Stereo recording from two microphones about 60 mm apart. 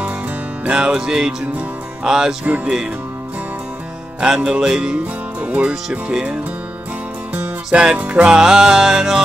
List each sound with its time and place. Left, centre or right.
0.7 s music: centre
4.2 s music: centre
5.4 s music: right
7.3 s music: right; by 9.2 s centre